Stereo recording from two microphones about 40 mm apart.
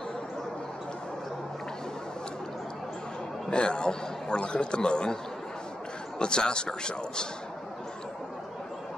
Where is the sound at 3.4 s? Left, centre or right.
Left.